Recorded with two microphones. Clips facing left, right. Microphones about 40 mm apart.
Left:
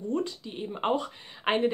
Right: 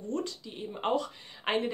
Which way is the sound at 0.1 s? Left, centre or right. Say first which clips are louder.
Left 3 dB; centre.